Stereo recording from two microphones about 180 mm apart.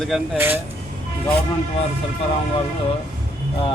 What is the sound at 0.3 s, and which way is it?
Speech, 10° right (ahead or behind).